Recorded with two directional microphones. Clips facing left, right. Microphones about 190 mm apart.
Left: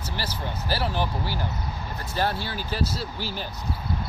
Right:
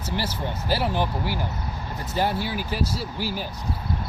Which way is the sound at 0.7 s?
20° right (ahead or behind).